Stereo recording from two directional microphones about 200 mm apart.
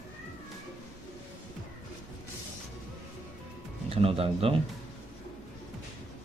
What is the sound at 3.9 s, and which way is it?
Speech, 30° right (ahead or behind).